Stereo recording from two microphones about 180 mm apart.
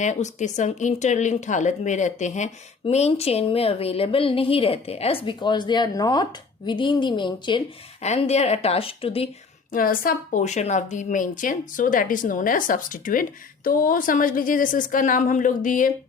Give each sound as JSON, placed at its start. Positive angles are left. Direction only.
{"t": 0.0, "sound": "a woman's voice", "side_deg": 40}
{"t": 8.0, "sound": "speech", "side_deg": 35}
{"t": 9.7, "sound": "speech", "side_deg": 50}